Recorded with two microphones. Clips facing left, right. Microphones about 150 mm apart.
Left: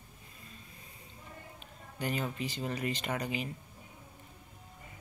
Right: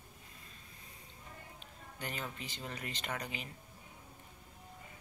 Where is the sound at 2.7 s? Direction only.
10° left (ahead or behind).